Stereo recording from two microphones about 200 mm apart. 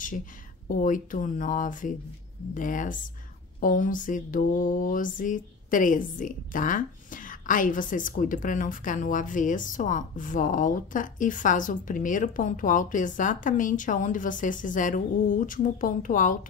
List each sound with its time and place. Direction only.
0.7 s mantra: 40° left (ahead or behind)